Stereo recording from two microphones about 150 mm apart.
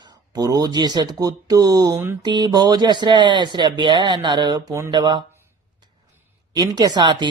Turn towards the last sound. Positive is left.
turn(degrees=-30)  # may be behind; listen again after turning